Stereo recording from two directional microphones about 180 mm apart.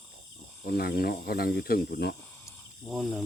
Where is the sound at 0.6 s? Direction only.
60° left (ahead or behind).